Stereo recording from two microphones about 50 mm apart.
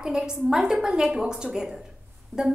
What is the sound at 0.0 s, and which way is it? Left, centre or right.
A woman's voice, centre.